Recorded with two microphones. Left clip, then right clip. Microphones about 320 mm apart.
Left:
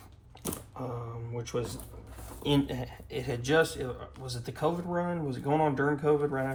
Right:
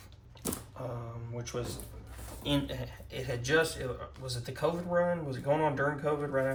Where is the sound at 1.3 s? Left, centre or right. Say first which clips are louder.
Left 4 dB; left.